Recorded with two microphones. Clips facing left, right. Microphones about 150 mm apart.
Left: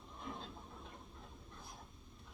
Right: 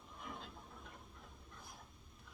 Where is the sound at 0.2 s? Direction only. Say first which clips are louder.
Left 3 dB; 25° left (ahead or behind).